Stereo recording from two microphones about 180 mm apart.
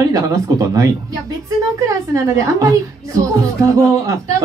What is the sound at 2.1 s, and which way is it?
Speech, 20° right (ahead or behind).